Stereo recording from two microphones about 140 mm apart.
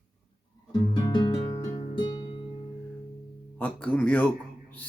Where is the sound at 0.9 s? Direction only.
30° left (ahead or behind).